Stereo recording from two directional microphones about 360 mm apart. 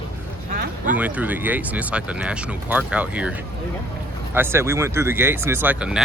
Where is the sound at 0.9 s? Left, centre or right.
Centre.